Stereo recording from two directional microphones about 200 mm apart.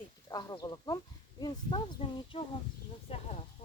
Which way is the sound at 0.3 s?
20° left (ahead or behind).